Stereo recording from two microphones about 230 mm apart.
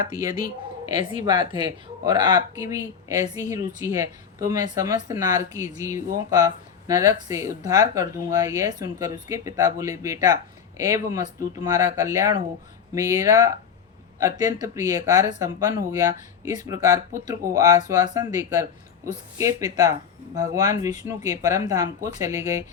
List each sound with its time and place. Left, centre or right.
0.2 s speech: centre